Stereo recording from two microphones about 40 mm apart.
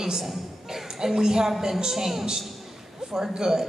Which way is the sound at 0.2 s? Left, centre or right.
Centre.